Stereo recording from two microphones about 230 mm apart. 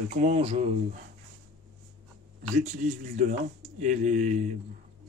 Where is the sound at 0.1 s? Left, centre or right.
Right.